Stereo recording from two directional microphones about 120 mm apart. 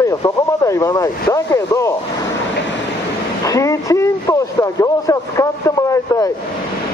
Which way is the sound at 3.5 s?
25° left (ahead or behind).